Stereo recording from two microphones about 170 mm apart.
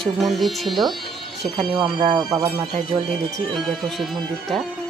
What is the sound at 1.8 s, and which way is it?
Speech, 30° right (ahead or behind).